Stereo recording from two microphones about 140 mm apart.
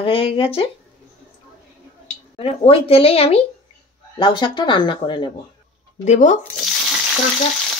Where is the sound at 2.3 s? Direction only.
45° left (ahead or behind).